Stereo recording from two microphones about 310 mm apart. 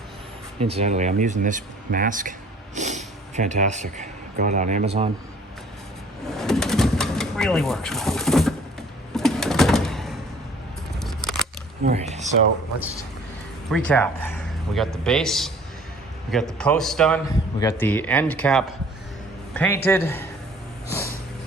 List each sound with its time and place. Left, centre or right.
0.6 s speech: centre
6.3 s bird: centre
11.0 s scissors: centre
11.8 s speech: right
13.7 s a man's voice: centre